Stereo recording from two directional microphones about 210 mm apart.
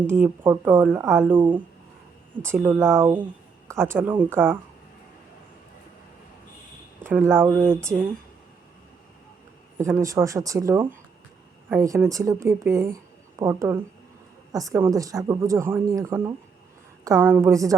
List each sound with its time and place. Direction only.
0.0 s speech: 10° right (ahead or behind)
1.4 s speech: 20° right (ahead or behind)
2.4 s speech: 10° right (ahead or behind)
7.0 s speech: 10° right (ahead or behind)
9.7 s speech: 15° right (ahead or behind)